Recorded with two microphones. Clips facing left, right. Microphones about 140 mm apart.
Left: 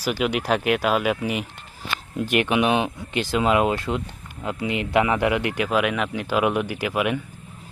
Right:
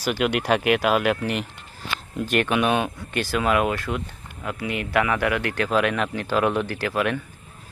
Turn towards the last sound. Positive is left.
turn(degrees=15)  # may be behind; listen again after turning